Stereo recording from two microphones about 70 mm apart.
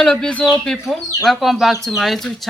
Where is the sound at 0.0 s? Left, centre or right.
Centre.